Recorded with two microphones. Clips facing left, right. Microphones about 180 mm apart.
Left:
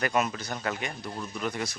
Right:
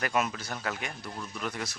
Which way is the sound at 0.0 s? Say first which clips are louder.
Left 2 dB; centre (ahead or behind).